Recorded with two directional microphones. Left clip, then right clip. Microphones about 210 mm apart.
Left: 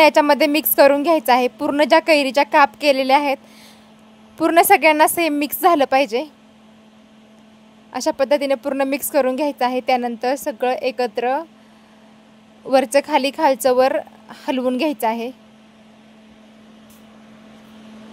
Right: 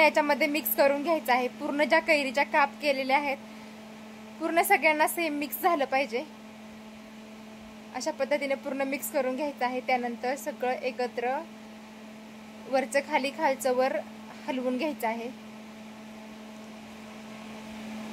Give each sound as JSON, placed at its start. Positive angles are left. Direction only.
{"t": 0.0, "sound": "a woman's voice", "side_deg": 45}
{"t": 4.4, "sound": "a woman's voice", "side_deg": 50}
{"t": 7.9, "sound": "a woman's voice", "side_deg": 45}
{"t": 12.7, "sound": "a woman's voice", "side_deg": 45}